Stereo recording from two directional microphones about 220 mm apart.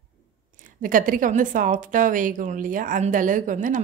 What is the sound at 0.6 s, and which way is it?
A woman's voice, 35° right (ahead or behind).